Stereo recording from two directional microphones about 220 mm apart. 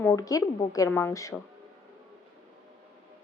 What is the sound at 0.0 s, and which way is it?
Speech, 15° left (ahead or behind).